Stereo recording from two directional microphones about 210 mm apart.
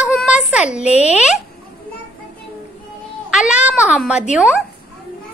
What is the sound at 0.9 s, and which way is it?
Speech, 30° left (ahead or behind).